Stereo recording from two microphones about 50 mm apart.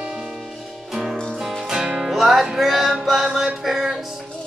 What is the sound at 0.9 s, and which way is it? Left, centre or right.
Music, centre.